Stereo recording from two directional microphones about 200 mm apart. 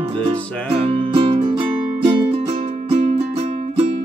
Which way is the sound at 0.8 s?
30° right (ahead or behind).